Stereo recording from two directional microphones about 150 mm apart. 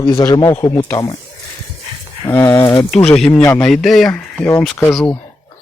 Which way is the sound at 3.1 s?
5° left (ahead or behind).